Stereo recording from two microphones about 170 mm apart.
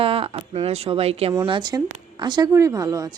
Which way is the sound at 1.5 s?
25° right (ahead or behind).